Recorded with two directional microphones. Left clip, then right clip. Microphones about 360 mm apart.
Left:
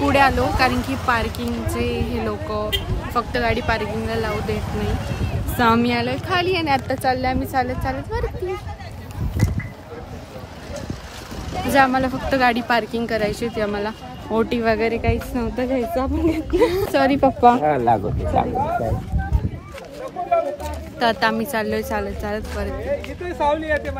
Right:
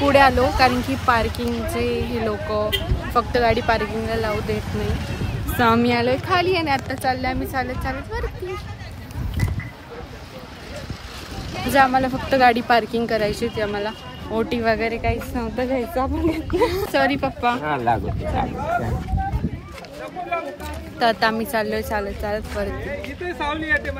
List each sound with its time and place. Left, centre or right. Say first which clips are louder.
0.0 s speech: right 2 dB; centre
5.6 s speech: even; centre
11.7 s speech: even; centre
21.0 s speech: even; centre
23.2 s speech: left 4 dB; left